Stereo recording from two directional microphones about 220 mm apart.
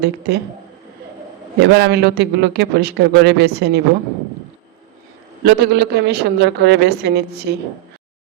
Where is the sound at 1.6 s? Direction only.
50° right (ahead or behind).